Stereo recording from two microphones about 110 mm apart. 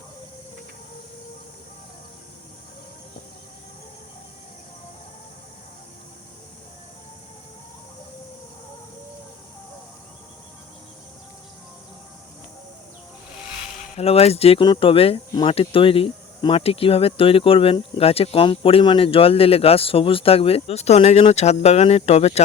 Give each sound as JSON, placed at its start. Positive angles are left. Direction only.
{"t": 13.9, "sound": "speech", "side_deg": 65}
{"t": 14.6, "sound": "speech", "side_deg": 50}